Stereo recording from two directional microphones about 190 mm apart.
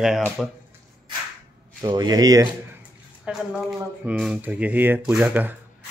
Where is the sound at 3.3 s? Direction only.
5° right (ahead or behind).